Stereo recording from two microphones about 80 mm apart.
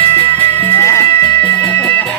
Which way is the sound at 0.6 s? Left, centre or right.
Left.